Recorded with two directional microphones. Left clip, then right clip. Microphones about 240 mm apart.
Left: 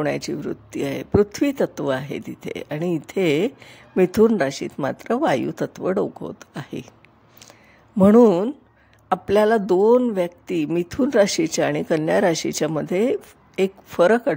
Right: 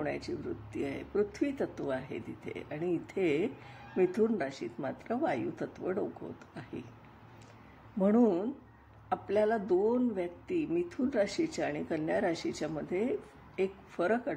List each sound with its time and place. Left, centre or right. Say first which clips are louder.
0.0 s speech: left 12 dB; left
8.0 s speech: left 14 dB; left